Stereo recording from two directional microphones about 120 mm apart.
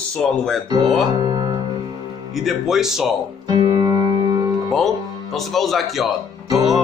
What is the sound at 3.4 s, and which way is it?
Music, 35° right (ahead or behind).